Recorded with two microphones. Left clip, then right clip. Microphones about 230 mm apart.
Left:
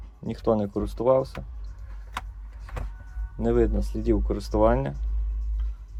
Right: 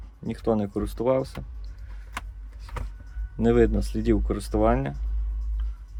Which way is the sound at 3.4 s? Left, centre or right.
Right.